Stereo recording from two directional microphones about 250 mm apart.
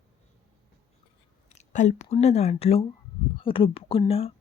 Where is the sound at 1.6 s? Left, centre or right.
Left.